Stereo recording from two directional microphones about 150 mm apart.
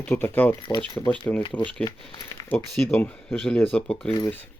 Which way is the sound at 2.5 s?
Centre (ahead or behind).